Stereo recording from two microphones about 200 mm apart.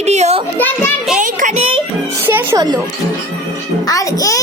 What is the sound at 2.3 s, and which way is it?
Music, 15° right (ahead or behind).